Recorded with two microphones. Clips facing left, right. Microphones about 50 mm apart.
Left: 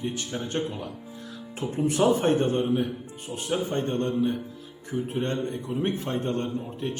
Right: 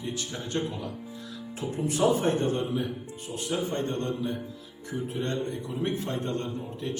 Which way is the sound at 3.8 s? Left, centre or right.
Left.